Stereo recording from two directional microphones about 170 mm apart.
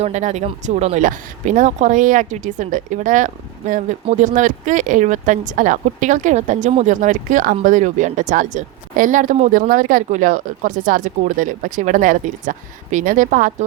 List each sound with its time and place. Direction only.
0.0 s speech: 45° right (ahead or behind)